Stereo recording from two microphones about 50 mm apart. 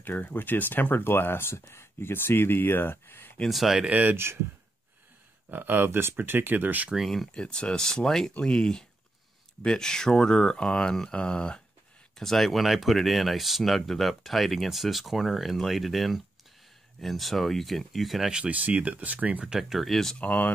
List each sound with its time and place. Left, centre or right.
0.0 s speech: left
3.4 s speech: centre
3.8 s speech: right
4.1 s speech: right
5.5 s speech: right
5.9 s speech: right
7.0 s speech: centre
7.3 s speech: centre
12.2 s speech: centre
18.3 s speech: right
19.4 s speech: centre
19.8 s speech: centre
20.2 s speech: left